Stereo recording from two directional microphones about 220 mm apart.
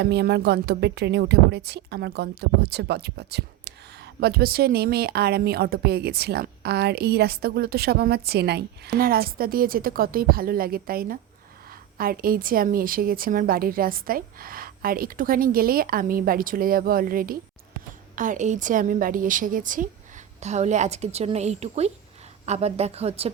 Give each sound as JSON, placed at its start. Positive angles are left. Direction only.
{"t": 0.0, "sound": "a woman's voice", "side_deg": -50}